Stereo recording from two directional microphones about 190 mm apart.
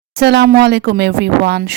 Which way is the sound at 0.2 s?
60° right (ahead or behind).